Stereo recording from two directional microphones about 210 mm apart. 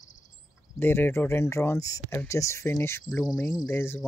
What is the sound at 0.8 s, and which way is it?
Speech, 10° left (ahead or behind).